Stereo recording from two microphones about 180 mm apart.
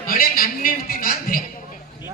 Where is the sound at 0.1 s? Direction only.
55° left (ahead or behind).